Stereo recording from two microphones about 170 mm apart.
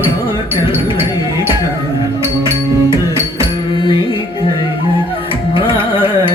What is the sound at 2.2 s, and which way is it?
Music, 15° right (ahead or behind).